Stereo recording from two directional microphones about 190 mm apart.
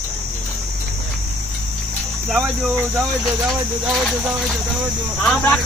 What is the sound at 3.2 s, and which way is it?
Speech, centre (ahead or behind).